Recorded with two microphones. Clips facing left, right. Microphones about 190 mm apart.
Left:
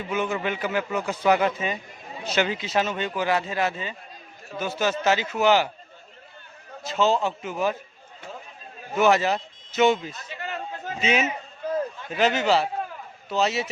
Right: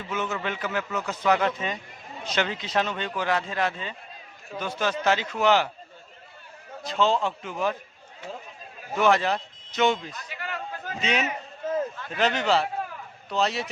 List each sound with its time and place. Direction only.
0.1 s a man's voice: 10° left (ahead or behind)
6.8 s a man's voice: 5° left (ahead or behind)
9.0 s speech: 5° left (ahead or behind)
10.1 s chatter: 25° left (ahead or behind)
12.1 s speech: 5° left (ahead or behind)